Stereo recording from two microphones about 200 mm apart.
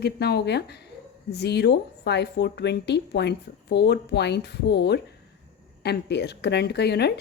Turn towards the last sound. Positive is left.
turn(degrees=55)  # may be behind; listen again after turning